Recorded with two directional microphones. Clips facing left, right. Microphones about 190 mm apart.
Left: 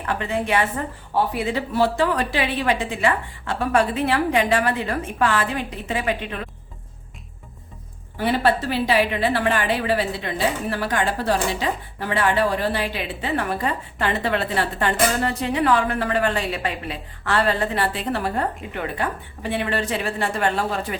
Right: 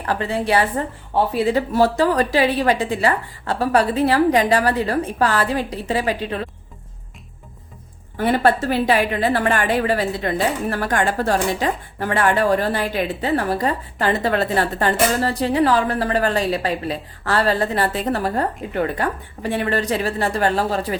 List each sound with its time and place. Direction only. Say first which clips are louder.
0.0 s a woman's voice: right 3 dB; 35° right (ahead or behind)
8.2 s a woman's voice: right 3 dB; 50° right (ahead or behind)